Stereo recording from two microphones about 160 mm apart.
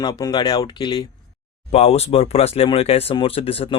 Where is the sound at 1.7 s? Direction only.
40° left (ahead or behind).